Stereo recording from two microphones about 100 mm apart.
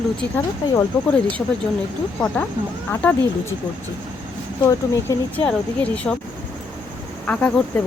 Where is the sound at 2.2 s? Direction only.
15° left (ahead or behind).